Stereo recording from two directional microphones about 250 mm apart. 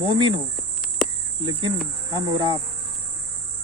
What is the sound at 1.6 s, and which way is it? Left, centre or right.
Cricket, centre.